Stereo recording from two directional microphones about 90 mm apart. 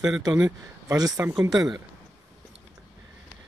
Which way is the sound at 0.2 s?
45° right (ahead or behind).